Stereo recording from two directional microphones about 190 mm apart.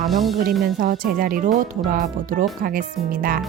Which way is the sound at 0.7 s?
45° right (ahead or behind).